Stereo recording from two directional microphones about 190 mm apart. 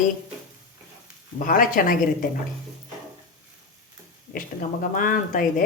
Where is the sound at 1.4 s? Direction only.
45° left (ahead or behind).